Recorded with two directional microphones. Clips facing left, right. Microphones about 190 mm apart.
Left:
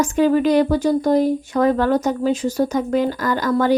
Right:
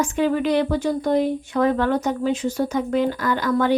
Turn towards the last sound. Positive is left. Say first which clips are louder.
# left 2 dB
turn(degrees=40)  # may be behind; listen again after turning